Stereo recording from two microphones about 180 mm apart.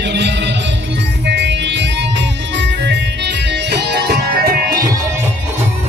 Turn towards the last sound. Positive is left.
turn(degrees=-55)  # may be behind; listen again after turning